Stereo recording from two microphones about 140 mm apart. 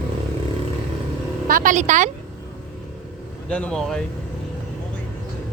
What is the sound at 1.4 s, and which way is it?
Speech, 75° right (ahead or behind).